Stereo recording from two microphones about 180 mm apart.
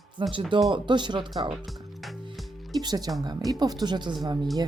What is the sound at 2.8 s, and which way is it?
Speech, 20° right (ahead or behind).